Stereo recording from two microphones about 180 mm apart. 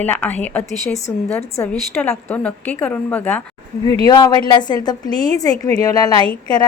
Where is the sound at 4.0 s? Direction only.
25° left (ahead or behind).